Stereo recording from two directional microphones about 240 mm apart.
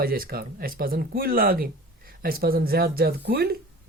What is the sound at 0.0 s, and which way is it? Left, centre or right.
Speech, right.